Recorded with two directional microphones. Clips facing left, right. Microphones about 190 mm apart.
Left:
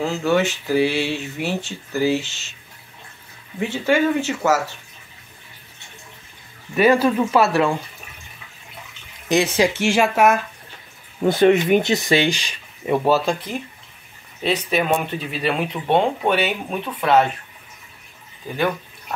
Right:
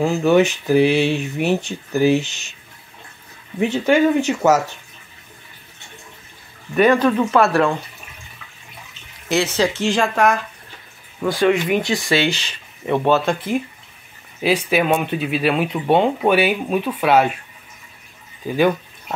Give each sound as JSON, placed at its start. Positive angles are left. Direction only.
{"t": 0.0, "sound": "speech", "side_deg": -15}
{"t": 3.5, "sound": "speech", "side_deg": -15}
{"t": 6.8, "sound": "speech", "side_deg": 10}
{"t": 9.3, "sound": "speech", "side_deg": 15}
{"t": 11.2, "sound": "speech", "side_deg": 25}
{"t": 14.4, "sound": "speech", "side_deg": -5}